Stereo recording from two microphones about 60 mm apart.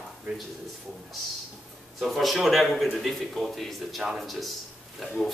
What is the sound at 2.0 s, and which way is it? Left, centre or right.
A man's voice, centre.